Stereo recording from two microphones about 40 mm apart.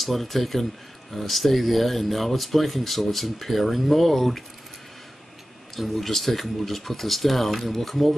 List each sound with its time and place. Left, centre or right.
0.0 s speech: centre
5.8 s speech: centre